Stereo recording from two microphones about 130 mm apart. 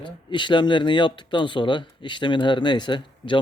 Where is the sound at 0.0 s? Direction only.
35° left (ahead or behind).